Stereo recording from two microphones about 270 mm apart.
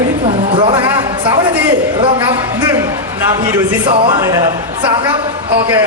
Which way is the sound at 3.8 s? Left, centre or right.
Centre.